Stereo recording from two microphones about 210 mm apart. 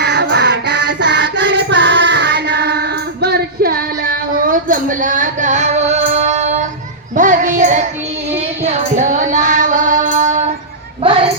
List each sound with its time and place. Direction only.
0.0 s music: 55° right (ahead or behind); by 6.7 s 35° right (ahead or behind)
7.2 s child singing: 35° right (ahead or behind)